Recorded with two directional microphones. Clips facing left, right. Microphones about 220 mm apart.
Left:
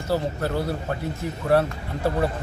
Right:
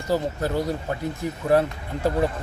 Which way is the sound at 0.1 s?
15° right (ahead or behind).